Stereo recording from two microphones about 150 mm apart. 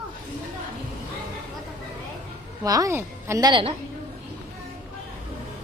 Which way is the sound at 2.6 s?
25° right (ahead or behind).